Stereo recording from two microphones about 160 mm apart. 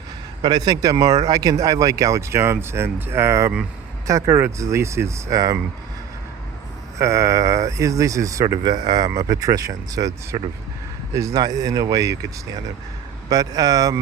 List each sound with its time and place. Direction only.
0.4 s speech: 25° right (ahead or behind)
7.0 s speech: 20° right (ahead or behind)